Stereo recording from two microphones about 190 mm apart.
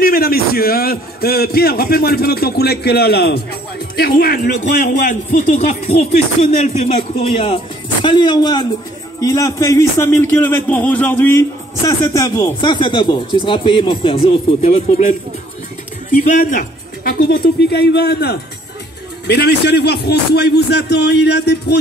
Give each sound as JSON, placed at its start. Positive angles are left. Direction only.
{"t": 0.0, "sound": "a man's voice", "side_deg": 50}
{"t": 16.3, "sound": "a man's voice", "side_deg": 45}